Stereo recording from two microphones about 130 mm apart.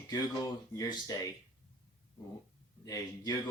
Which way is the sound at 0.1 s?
25° left (ahead or behind).